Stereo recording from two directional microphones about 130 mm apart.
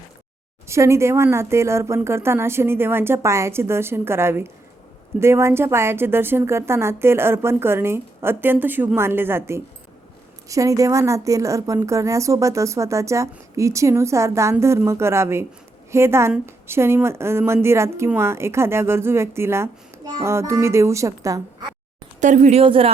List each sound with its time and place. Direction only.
0.7 s a woman's voice: 20° right (ahead or behind)
22.2 s speech: 65° right (ahead or behind)
22.6 s speech: 45° right (ahead or behind)